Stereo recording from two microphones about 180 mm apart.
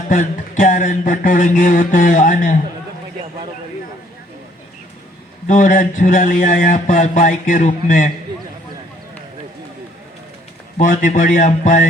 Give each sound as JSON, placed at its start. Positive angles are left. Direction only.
{"t": 0.1, "sound": "speech", "side_deg": 45}
{"t": 5.5, "sound": "speech", "side_deg": 45}
{"t": 10.8, "sound": "speech", "side_deg": 45}